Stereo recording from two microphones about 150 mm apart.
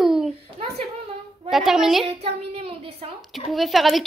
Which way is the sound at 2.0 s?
40° right (ahead or behind).